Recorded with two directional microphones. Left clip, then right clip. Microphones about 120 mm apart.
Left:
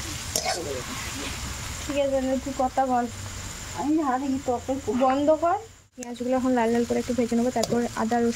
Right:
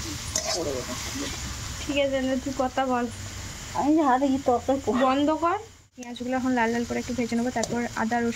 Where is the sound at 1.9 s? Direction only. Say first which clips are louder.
Right 1 dB; 30° left (ahead or behind).